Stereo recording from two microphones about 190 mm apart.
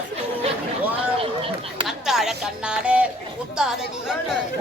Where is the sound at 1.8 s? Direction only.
Centre (ahead or behind).